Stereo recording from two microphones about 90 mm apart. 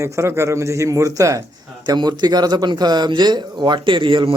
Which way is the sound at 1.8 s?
50° right (ahead or behind).